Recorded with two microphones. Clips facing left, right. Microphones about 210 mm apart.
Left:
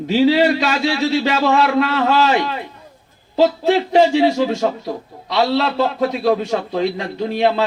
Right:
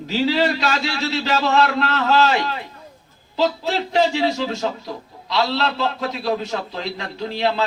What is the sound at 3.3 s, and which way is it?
A man's voice, 50° left (ahead or behind).